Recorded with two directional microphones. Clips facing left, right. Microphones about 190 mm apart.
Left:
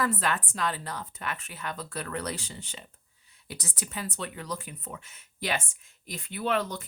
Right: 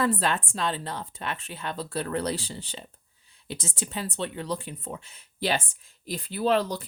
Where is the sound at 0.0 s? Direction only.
30° right (ahead or behind).